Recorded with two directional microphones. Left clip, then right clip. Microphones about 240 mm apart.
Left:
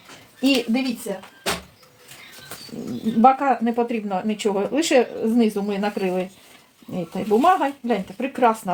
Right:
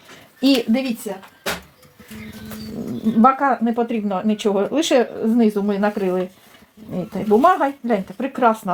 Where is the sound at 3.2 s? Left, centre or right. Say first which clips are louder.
Right 1 dB; right.